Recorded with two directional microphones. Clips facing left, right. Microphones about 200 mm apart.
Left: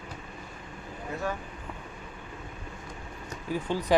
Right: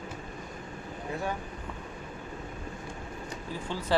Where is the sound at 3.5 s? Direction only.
15° left (ahead or behind).